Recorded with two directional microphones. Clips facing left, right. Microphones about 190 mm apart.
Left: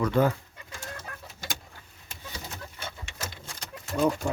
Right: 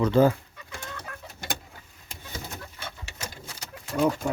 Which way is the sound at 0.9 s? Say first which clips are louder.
Right 2 dB; 60° right (ahead or behind).